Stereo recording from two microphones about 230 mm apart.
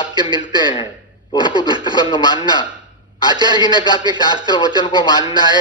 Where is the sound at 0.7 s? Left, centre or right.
Left.